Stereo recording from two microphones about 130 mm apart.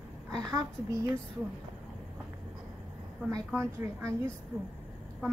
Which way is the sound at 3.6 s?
15° right (ahead or behind).